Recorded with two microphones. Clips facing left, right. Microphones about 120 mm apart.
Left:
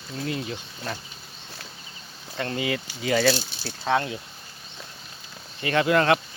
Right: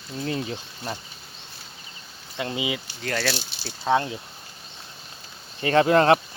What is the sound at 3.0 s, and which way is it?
Speech, 5° left (ahead or behind).